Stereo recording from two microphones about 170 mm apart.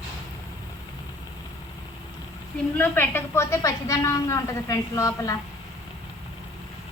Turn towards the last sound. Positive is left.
turn(degrees=20)  # may be behind; listen again after turning